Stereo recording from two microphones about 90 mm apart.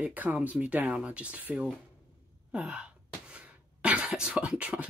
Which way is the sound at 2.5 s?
10° right (ahead or behind).